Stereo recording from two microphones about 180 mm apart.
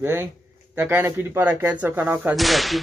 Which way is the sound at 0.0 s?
15° right (ahead or behind).